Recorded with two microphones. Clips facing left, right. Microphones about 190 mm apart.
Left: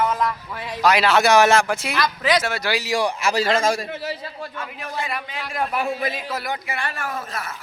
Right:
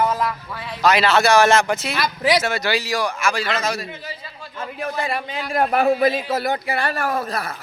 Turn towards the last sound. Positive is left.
turn(degrees=-35)  # may be behind; listen again after turning